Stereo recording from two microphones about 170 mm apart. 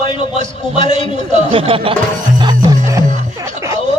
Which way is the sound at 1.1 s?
35° right (ahead or behind).